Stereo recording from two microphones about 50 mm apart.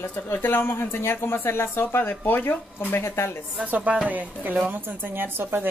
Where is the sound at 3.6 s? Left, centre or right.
Right.